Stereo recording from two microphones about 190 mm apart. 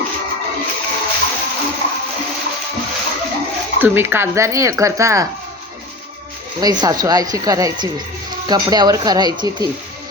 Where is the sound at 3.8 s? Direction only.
10° right (ahead or behind).